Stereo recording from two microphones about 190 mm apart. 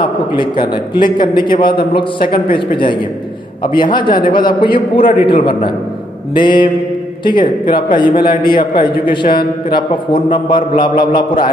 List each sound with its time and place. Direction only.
0.0 s a man's voice: 25° left (ahead or behind)